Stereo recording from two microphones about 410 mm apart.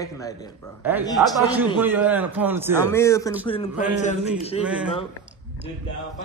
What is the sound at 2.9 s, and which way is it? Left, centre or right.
A man's voice, centre.